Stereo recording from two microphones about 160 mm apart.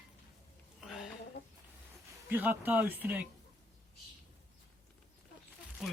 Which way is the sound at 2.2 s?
10° right (ahead or behind).